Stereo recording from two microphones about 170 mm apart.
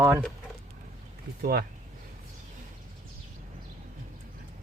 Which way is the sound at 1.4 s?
65° right (ahead or behind).